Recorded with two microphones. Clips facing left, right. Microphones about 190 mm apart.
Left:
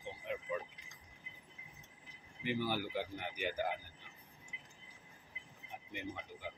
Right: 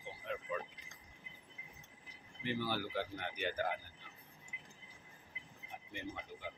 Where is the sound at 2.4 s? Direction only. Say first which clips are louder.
Left 1 dB; 15° left (ahead or behind).